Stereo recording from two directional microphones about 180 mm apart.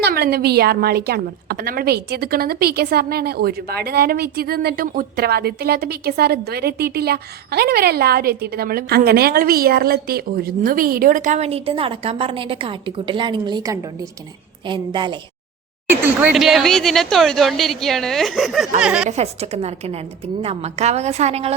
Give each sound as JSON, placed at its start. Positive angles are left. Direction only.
{"t": 0.0, "sound": "a woman's voice", "side_deg": -60}
{"t": 15.9, "sound": "speech", "side_deg": -5}
{"t": 19.0, "sound": "a woman's voice", "side_deg": -35}